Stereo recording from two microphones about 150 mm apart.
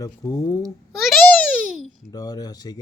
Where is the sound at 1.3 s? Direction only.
5° left (ahead or behind).